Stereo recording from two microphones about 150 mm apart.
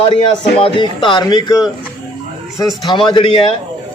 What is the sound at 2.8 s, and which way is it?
Speech, 30° left (ahead or behind).